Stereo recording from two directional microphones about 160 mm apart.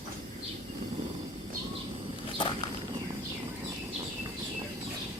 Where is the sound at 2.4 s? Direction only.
30° left (ahead or behind).